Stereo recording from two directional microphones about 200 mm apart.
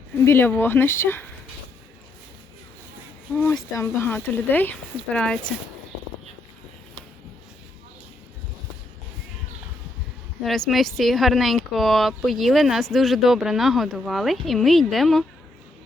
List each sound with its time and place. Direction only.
0.3 s speech: 10° left (ahead or behind)
3.3 s speech: 10° left (ahead or behind)
10.4 s speech: centre (ahead or behind)